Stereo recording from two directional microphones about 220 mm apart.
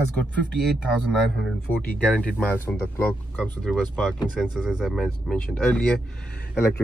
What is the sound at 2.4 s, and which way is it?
Speech, 10° left (ahead or behind).